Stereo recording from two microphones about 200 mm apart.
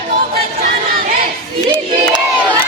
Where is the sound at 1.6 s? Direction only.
25° right (ahead or behind).